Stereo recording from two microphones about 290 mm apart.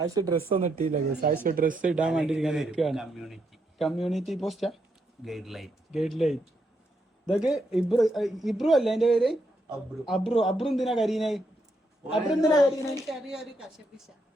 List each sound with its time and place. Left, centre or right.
0.0 s speech: centre
0.4 s speech: right
1.9 s a man's voice: centre